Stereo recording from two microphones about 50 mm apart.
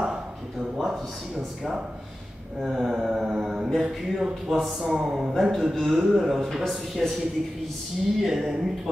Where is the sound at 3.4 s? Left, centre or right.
Centre.